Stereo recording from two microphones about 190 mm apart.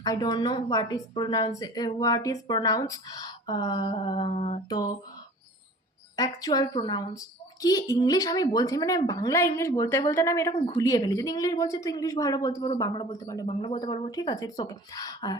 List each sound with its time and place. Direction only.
0.0 s a woman's voice: 20° left (ahead or behind)
4.7 s a woman's voice: 20° left (ahead or behind)
6.1 s a woman's voice: 20° left (ahead or behind)